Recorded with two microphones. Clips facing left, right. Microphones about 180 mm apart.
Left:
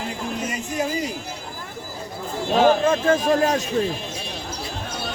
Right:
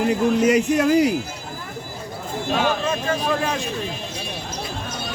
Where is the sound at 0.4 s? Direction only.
70° right (ahead or behind).